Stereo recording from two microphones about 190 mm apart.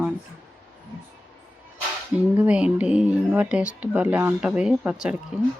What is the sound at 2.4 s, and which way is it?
Speech, 5° right (ahead or behind).